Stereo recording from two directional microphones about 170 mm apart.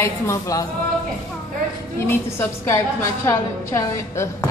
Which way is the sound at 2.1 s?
15° left (ahead or behind).